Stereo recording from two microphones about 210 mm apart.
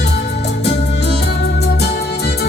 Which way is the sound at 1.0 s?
50° left (ahead or behind).